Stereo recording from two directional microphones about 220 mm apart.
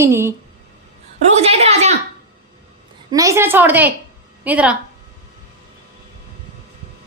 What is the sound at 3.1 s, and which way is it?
A child's voice, 15° right (ahead or behind).